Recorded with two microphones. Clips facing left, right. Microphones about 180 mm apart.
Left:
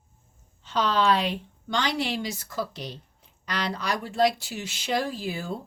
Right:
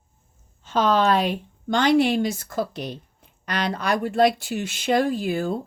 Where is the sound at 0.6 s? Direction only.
50° right (ahead or behind).